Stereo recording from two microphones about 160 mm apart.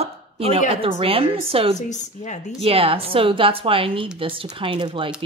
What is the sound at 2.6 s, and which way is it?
A woman's voice, 35° right (ahead or behind).